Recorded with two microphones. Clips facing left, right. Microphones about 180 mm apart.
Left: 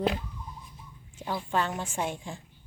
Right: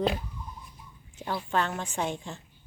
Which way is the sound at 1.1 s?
15° left (ahead or behind).